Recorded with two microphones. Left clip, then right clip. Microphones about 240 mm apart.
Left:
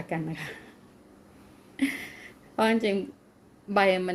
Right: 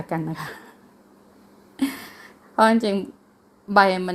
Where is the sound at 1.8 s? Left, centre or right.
Right.